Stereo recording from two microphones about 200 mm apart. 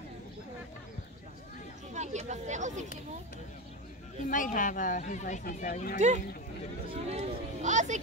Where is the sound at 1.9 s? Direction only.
35° right (ahead or behind).